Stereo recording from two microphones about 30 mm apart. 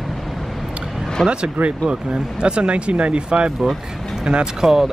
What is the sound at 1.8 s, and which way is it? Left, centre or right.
Speech, right.